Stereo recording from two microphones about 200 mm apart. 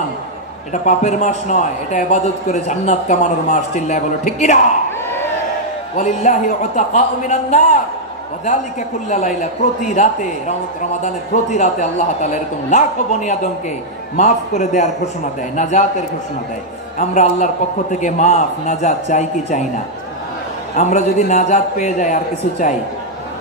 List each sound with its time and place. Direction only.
0.8 s a man's voice: 35° left (ahead or behind)
5.9 s a man's voice: 35° left (ahead or behind)
9.1 s a man's voice: 35° left (ahead or behind)
11.5 s a man's voice: 35° left (ahead or behind)
17.1 s a man's voice: 35° left (ahead or behind)
20.7 s a man's voice: 35° left (ahead or behind)